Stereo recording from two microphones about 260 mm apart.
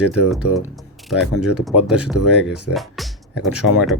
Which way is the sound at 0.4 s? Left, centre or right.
Left.